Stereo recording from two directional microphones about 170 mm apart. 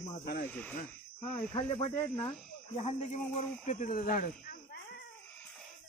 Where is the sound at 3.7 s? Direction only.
55° left (ahead or behind).